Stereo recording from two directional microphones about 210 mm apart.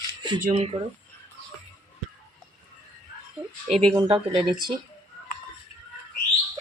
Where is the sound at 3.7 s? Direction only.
30° right (ahead or behind).